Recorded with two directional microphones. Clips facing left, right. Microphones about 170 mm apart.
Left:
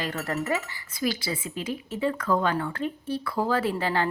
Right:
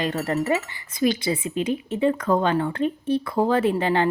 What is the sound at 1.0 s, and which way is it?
Speech, 20° right (ahead or behind).